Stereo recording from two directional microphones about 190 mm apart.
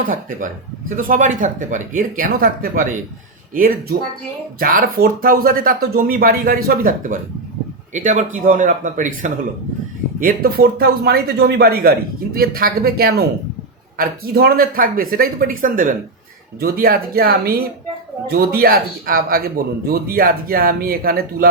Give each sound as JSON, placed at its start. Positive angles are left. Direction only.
{"t": 0.0, "sound": "speech", "side_deg": -45}